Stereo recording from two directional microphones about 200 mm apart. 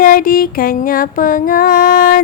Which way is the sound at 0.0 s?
45° left (ahead or behind).